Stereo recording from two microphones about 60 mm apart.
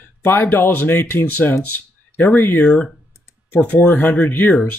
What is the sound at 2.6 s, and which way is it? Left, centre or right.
Speech, centre.